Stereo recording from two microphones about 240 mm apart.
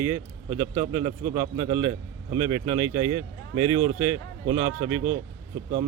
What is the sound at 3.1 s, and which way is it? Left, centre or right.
Speech, right.